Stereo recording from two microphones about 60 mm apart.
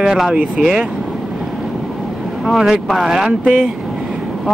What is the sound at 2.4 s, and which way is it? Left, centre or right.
Speech, centre.